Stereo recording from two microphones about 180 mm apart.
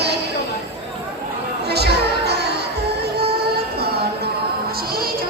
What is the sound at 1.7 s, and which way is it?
Music, 65° right (ahead or behind).